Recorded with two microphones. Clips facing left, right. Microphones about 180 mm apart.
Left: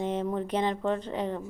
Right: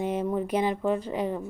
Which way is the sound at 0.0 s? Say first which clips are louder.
Right 2 dB; 10° right (ahead or behind).